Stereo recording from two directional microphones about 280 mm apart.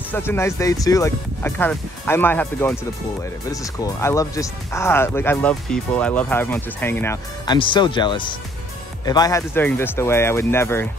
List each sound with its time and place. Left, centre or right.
0.1 s speech: centre